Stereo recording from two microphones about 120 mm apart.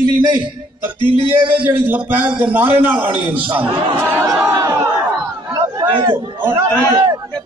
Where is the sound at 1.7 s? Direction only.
15° right (ahead or behind).